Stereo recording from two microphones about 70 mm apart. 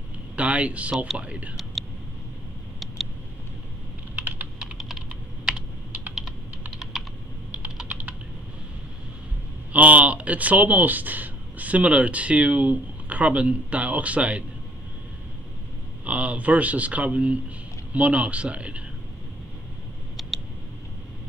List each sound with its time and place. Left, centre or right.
0.4 s speech: centre
4.1 s typing: centre
4.7 s computer keyboard: centre
6.9 s computer keyboard: centre
9.7 s speech: right
16.0 s speech: centre
20.2 s a sound: centre